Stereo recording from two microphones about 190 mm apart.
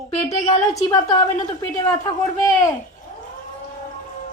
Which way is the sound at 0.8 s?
20° left (ahead or behind).